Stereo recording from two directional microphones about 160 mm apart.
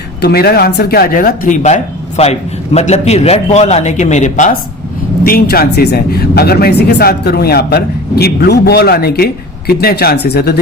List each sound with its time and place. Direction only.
0.2 s a man's voice: 80° left; by 4.5 s 50° left (ahead or behind)
5.2 s speech: 70° left (ahead or behind); by 10.5 s 85° left